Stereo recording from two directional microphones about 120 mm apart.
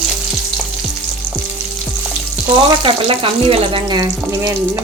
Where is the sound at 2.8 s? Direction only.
50° right (ahead or behind).